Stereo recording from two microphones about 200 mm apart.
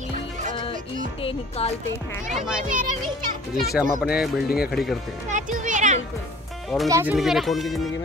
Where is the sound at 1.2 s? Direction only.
30° left (ahead or behind).